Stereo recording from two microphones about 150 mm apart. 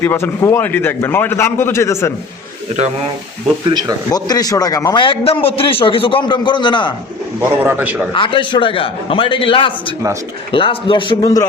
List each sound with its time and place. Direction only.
0.0 s a man's voice: 15° left (ahead or behind)
3.7 s speech: 30° right (ahead or behind)
4.1 s a man's voice: 25° left (ahead or behind)
7.6 s a man's voice: 10° right (ahead or behind)
8.1 s a man's voice: 35° left (ahead or behind)